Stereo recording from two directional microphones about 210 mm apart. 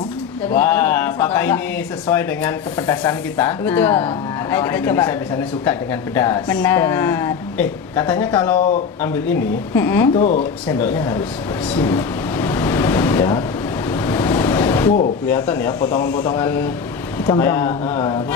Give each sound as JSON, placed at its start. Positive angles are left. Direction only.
{"t": 0.6, "sound": "a sound", "side_deg": 10}
{"t": 2.0, "sound": "a woman's voice", "side_deg": 10}
{"t": 10.1, "sound": "speech", "side_deg": 35}
{"t": 10.8, "sound": "a woman's voice", "side_deg": 10}
{"t": 11.8, "sound": "a sound", "side_deg": 15}
{"t": 15.2, "sound": "a woman's voice", "side_deg": 5}
{"t": 17.3, "sound": "a woman's voice", "side_deg": 10}